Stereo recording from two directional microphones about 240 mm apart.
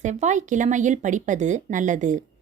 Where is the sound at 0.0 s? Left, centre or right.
Right.